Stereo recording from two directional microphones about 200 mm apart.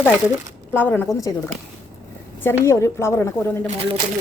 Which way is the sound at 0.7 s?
10° left (ahead or behind).